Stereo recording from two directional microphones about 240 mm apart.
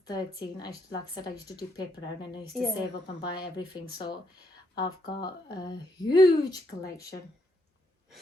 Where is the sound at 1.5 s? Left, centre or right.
Centre.